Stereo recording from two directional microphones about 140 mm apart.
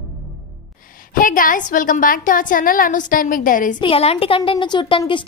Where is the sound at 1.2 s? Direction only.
75° left (ahead or behind).